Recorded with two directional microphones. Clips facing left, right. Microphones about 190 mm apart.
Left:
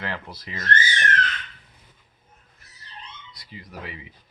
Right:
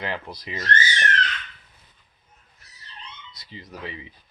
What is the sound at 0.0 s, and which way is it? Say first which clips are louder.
Speech: right 2 dB; 15° right (ahead or behind).